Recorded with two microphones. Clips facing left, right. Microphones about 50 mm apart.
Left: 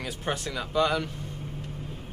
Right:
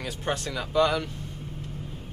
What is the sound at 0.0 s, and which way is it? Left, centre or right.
Speech, centre.